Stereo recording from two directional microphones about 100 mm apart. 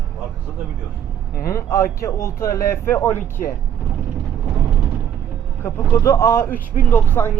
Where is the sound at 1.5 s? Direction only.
30° left (ahead or behind).